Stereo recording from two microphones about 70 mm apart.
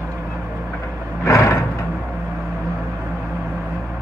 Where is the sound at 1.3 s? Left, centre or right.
Left.